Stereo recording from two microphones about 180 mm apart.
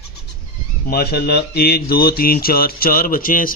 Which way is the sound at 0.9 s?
60° left (ahead or behind).